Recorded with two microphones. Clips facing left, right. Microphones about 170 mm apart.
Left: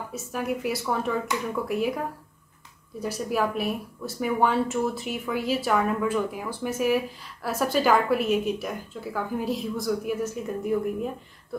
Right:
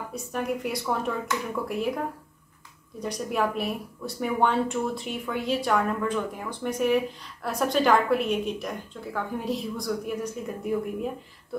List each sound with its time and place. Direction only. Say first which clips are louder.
0.1 s speech: even; 5° left (ahead or behind)
3.0 s speech: left 1 dB; 5° left (ahead or behind)